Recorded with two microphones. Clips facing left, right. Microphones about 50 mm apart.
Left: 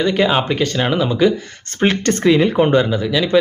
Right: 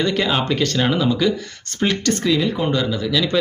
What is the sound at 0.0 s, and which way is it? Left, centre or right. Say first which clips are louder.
Speech: left 4 dB; centre.